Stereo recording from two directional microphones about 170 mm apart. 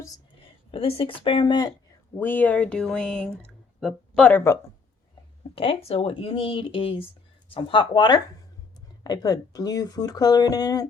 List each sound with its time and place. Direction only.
0.4 s speech: 30° left (ahead or behind)
2.1 s speech: 10° left (ahead or behind)
5.5 s speech: 35° left (ahead or behind)